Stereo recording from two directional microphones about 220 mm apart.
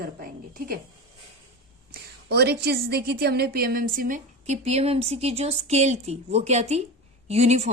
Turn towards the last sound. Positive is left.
turn(degrees=-30)  # may be behind; listen again after turning